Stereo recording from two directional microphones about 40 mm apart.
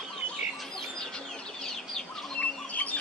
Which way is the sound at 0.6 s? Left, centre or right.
Centre.